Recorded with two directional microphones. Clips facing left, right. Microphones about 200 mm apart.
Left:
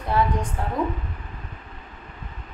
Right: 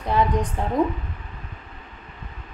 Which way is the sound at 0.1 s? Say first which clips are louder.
Right 2 dB; 15° right (ahead or behind).